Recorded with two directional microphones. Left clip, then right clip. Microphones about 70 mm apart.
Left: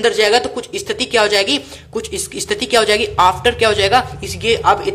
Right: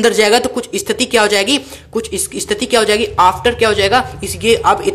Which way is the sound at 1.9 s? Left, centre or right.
Right.